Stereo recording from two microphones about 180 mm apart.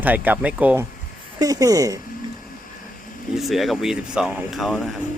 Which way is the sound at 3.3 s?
Centre (ahead or behind).